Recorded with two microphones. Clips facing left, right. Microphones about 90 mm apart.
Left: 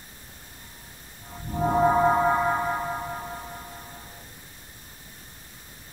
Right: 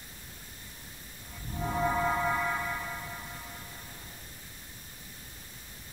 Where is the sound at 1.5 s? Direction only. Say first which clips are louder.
Left 9 dB; 40° left (ahead or behind).